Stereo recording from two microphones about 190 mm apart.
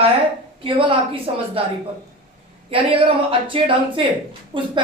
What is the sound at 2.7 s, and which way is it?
A woman's voice, 30° right (ahead or behind).